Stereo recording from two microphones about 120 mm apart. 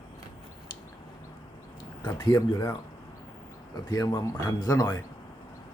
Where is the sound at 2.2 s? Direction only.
35° left (ahead or behind).